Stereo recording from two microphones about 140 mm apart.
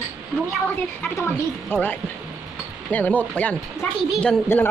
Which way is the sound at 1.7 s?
10° left (ahead or behind).